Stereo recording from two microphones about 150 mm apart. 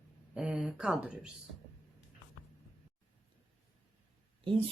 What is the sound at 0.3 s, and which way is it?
Speech, 10° right (ahead or behind).